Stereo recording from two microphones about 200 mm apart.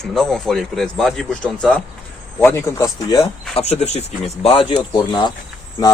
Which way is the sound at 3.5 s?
30° left (ahead or behind).